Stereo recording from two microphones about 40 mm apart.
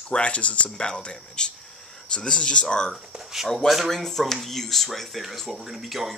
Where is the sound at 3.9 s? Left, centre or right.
Centre.